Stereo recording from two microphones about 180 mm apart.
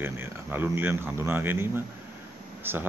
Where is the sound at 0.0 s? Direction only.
10° right (ahead or behind).